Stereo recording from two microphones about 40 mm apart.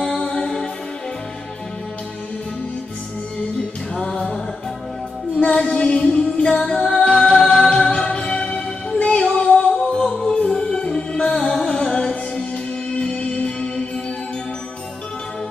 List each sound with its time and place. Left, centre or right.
0.2 s music: left
5.4 s female singing: left
6.8 s music: centre